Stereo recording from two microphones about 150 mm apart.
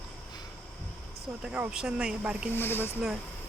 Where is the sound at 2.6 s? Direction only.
15° left (ahead or behind).